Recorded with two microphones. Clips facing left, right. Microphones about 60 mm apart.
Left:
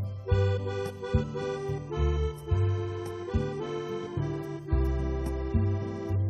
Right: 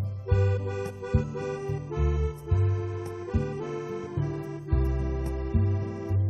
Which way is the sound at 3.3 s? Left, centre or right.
Right.